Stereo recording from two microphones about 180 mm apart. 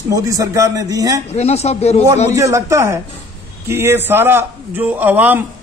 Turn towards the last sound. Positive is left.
turn(degrees=-10)  # may be behind; listen again after turning